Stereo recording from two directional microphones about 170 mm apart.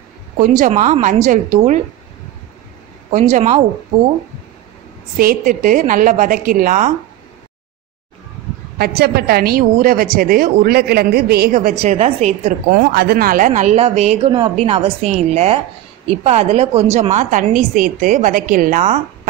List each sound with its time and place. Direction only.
0.4 s a woman's voice: 50° right (ahead or behind)
3.1 s a woman's voice: 45° right (ahead or behind)
5.1 s a woman's voice: 55° right (ahead or behind)
8.7 s a woman's voice: 65° right (ahead or behind)
11.7 s a woman's voice: 40° right (ahead or behind)
12.7 s a woman's voice: 75° right (ahead or behind); by 18.9 s 50° right (ahead or behind)